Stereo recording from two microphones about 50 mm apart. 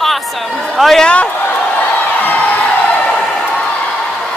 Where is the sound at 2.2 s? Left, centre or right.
Left.